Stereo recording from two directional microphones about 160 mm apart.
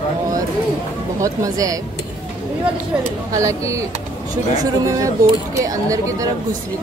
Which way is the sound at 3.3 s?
20° right (ahead or behind).